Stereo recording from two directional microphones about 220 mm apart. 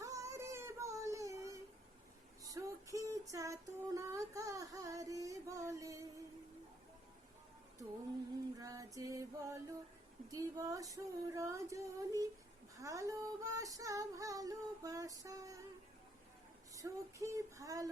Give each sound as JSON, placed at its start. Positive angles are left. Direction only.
{"t": 0.0, "sound": "a sound", "side_deg": -15}
{"t": 2.4, "sound": "female singing", "side_deg": -15}
{"t": 8.5, "sound": "female singing", "side_deg": -15}
{"t": 16.7, "sound": "female singing", "side_deg": -15}